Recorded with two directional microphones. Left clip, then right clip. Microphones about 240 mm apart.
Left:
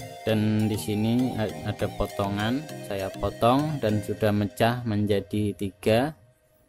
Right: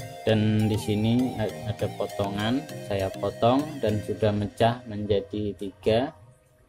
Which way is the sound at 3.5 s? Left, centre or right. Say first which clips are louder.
Left 1 dB; centre.